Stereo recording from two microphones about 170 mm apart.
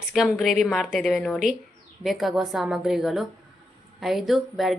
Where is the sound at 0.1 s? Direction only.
Centre (ahead or behind).